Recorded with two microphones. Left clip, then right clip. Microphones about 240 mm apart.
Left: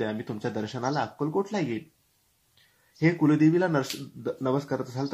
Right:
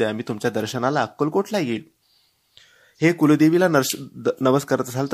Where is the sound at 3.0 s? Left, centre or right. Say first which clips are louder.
Right 6 dB; right.